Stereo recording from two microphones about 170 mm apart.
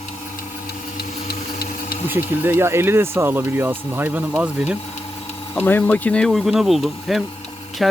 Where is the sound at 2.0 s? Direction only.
10° right (ahead or behind).